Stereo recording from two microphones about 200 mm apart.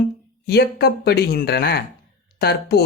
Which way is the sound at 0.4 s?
50° left (ahead or behind).